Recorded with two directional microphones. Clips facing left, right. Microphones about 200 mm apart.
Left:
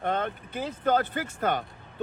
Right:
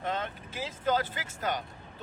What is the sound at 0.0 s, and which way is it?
Speech, 55° left (ahead or behind).